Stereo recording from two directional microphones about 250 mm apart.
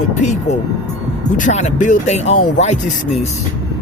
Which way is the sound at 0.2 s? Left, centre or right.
Left.